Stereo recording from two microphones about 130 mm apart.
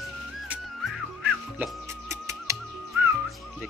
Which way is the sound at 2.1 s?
20° right (ahead or behind).